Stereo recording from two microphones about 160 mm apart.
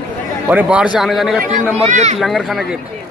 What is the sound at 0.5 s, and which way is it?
Speech, 10° right (ahead or behind).